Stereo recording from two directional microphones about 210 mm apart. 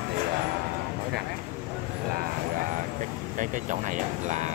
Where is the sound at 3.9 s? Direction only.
35° right (ahead or behind).